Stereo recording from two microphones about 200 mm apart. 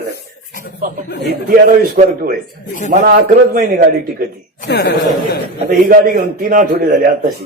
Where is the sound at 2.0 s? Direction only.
35° right (ahead or behind).